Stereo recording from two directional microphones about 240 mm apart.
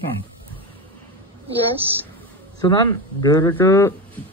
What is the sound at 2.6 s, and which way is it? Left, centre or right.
Speech, centre.